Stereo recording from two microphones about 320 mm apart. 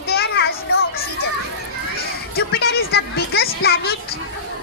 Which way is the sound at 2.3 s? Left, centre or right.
Left.